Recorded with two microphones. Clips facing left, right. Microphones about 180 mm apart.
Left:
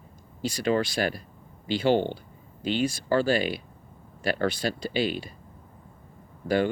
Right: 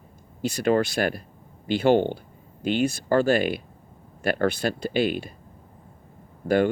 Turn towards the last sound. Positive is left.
turn(degrees=-50)  # may be behind; listen again after turning